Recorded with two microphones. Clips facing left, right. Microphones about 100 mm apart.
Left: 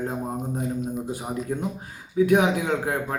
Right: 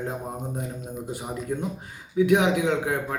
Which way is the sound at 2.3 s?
5° left (ahead or behind).